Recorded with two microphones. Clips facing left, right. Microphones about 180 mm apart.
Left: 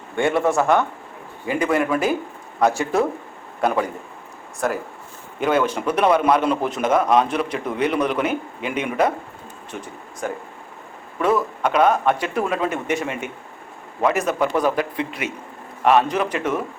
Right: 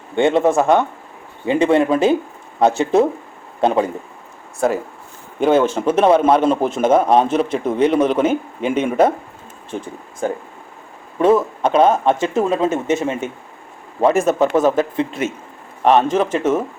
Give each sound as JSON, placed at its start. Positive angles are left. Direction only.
{"t": 0.2, "sound": "a man's voice", "side_deg": -20}
{"t": 5.5, "sound": "a man's voice", "side_deg": -25}
{"t": 9.7, "sound": "a man's voice", "side_deg": -30}